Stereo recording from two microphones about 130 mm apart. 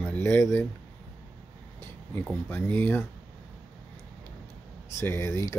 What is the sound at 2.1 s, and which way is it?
Speech, 15° left (ahead or behind).